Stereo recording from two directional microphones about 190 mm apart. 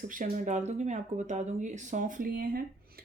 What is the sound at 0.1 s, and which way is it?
Speech, 45° right (ahead or behind).